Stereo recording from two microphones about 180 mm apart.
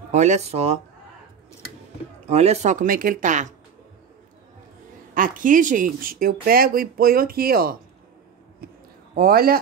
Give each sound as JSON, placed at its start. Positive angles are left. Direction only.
{"t": 0.1, "sound": "speech", "side_deg": -40}
{"t": 2.2, "sound": "speech", "side_deg": -35}
{"t": 5.1, "sound": "speech", "side_deg": -50}
{"t": 8.6, "sound": "a sound", "side_deg": -60}
{"t": 9.1, "sound": "speech", "side_deg": -55}